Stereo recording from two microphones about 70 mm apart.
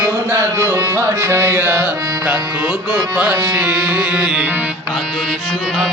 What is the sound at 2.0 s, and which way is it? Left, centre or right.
Music, right.